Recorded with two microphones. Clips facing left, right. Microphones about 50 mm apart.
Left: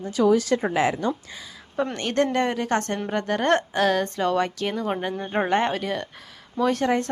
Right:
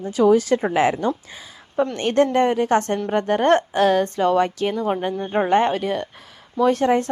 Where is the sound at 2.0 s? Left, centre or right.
Centre.